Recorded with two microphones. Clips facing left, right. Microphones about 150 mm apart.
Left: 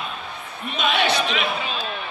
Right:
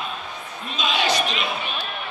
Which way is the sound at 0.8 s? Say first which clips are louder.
Left 2 dB; 60° left (ahead or behind).